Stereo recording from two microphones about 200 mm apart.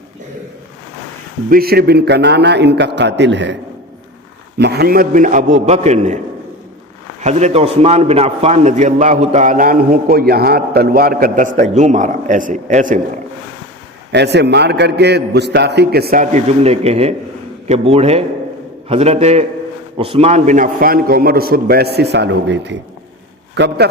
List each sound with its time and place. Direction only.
1.5 s a man's voice: 50° right (ahead or behind)
7.2 s a man's voice: 35° right (ahead or behind)
14.1 s a man's voice: 60° right (ahead or behind)